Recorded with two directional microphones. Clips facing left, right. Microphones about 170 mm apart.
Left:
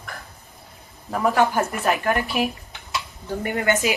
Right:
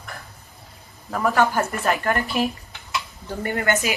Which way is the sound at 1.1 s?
15° left (ahead or behind).